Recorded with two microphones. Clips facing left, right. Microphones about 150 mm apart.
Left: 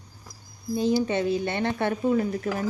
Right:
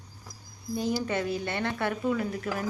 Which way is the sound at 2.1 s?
40° left (ahead or behind).